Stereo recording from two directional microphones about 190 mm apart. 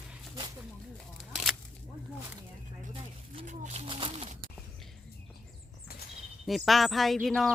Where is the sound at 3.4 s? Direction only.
40° right (ahead or behind).